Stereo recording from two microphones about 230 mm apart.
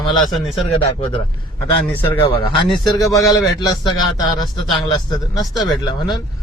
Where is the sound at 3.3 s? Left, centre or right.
Centre.